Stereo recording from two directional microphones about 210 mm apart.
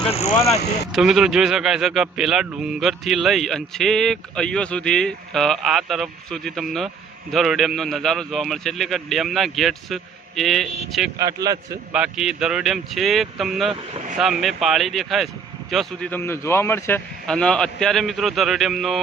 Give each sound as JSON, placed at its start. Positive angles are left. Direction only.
{"t": 0.0, "sound": "speech", "side_deg": 30}
{"t": 0.9, "sound": "a man's voice", "side_deg": 0}
{"t": 11.2, "sound": "a man's voice", "side_deg": -15}
{"t": 11.9, "sound": "a man's voice", "side_deg": -5}